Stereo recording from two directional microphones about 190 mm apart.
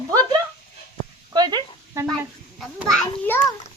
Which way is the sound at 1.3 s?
20° right (ahead or behind).